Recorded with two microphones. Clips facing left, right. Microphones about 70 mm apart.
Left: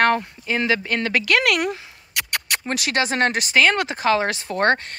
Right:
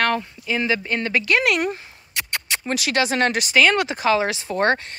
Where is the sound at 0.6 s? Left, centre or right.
Left.